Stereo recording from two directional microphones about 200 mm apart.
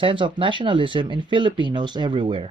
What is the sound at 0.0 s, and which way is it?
Speech, 25° right (ahead or behind).